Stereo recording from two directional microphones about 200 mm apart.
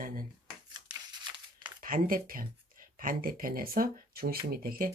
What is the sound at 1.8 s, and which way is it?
Speech, 40° right (ahead or behind).